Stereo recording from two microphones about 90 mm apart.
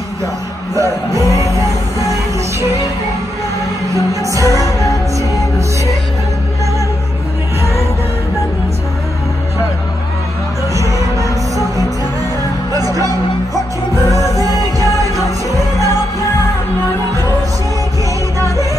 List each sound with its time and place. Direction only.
0.7 s music: 35° right (ahead or behind)
3.9 s music: 40° right (ahead or behind)
10.7 s music: 35° right (ahead or behind)
12.7 s music: 40° right (ahead or behind)
14.1 s music: 40° right (ahead or behind)